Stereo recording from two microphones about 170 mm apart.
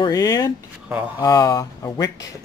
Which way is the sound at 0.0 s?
20° left (ahead or behind).